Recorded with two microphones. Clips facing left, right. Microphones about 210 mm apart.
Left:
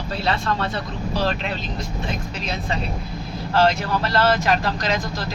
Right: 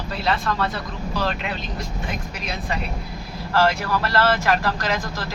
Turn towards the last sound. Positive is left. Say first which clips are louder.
# even
turn(degrees=20)  # may be behind; listen again after turning